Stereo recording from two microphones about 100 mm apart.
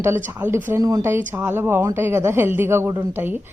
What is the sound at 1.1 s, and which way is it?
A woman's voice, 20° right (ahead or behind).